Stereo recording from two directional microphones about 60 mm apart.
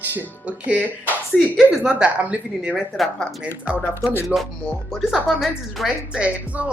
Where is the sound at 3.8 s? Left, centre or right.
Left.